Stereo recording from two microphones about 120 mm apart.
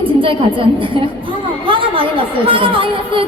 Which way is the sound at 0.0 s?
45° right (ahead or behind).